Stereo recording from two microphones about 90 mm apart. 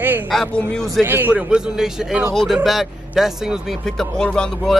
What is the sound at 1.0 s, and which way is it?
Speech, 25° right (ahead or behind).